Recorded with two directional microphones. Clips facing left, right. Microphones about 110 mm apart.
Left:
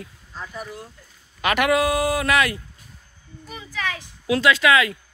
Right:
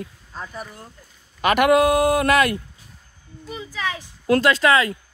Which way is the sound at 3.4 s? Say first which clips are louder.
Right 2 dB; 25° right (ahead or behind).